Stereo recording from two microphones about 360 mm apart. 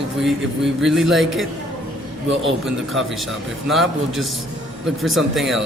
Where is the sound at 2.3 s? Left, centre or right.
Right.